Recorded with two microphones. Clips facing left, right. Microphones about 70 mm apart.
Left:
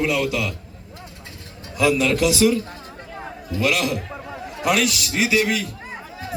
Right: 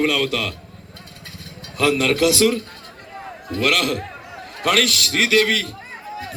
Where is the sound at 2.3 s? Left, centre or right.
Right.